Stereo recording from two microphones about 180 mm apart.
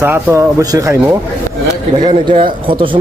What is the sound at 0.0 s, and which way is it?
Speech, 15° right (ahead or behind).